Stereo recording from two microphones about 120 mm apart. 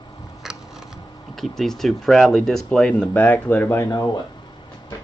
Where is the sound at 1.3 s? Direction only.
Centre (ahead or behind); by 3.9 s 20° left (ahead or behind).